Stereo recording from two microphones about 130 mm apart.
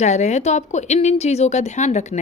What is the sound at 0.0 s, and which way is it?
A woman's voice, 60° left (ahead or behind).